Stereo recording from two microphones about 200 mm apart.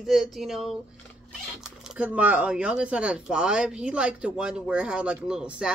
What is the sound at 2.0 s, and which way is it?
Speech, 5° right (ahead or behind).